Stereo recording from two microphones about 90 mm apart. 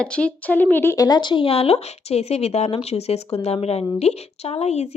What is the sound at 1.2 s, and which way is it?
Speech, 65° left (ahead or behind).